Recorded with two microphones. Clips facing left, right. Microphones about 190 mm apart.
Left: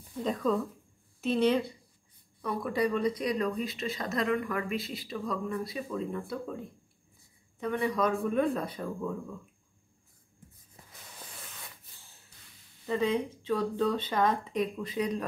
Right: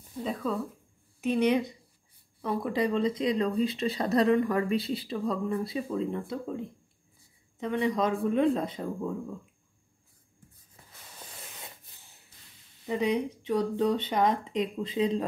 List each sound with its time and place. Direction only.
0.2 s a woman's voice: 5° right (ahead or behind); by 9.1 s 25° right (ahead or behind)
11.6 s spray: 20° right (ahead or behind)
12.8 s speech: 20° right (ahead or behind)